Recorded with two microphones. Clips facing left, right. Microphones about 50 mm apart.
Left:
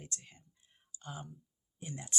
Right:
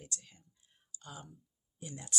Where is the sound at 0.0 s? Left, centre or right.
Left.